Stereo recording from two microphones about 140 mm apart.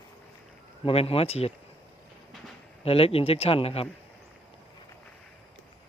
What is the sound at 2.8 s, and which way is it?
Speech, 45° left (ahead or behind).